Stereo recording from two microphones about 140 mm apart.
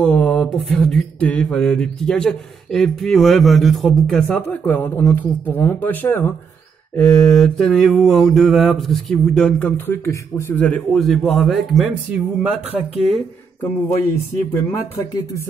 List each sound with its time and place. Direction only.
0.0 s a sound: 5° left (ahead or behind)
0.7 s mantra: 5° left (ahead or behind)
4.4 s speech: 15° left (ahead or behind)
7.0 s mantra: 5° left (ahead or behind)
13.6 s speech: 20° left (ahead or behind)